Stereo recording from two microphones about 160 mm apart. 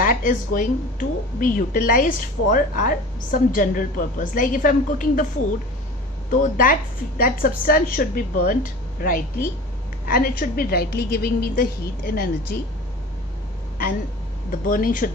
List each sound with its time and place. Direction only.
0.0 s speech: 60° left (ahead or behind)
6.3 s a woman's voice: 55° left (ahead or behind)
14.5 s speech: 60° left (ahead or behind)